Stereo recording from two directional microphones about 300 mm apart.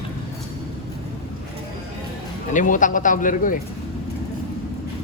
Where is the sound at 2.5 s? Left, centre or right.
Left.